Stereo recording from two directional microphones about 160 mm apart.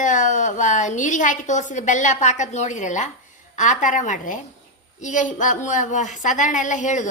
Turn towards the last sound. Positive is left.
turn(degrees=50)  # may be behind; listen again after turning